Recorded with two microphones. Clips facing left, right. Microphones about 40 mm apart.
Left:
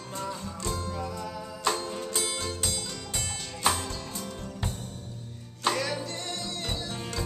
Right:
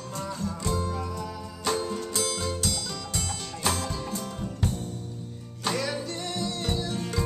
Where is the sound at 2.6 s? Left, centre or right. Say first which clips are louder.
Right 2 dB; centre.